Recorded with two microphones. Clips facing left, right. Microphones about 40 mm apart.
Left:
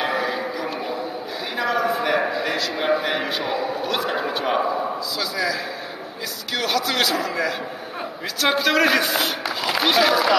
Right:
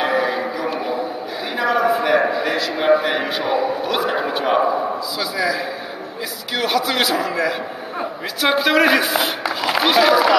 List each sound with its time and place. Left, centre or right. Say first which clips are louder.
0.0 s a sound: right 4 dB; centre
1.6 s a man's voice: right 4 dB; centre
6.5 s a man's voice: right 3 dB; centre